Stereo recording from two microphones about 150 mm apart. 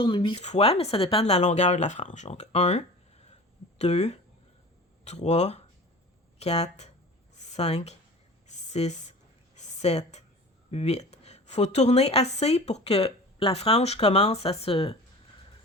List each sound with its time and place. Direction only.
0.0 s speech: 30° left (ahead or behind)
0.3 s a woman's voice: 45° left (ahead or behind)
7.3 s a sound: 50° left (ahead or behind)
10.7 s a woman's voice: 45° left (ahead or behind)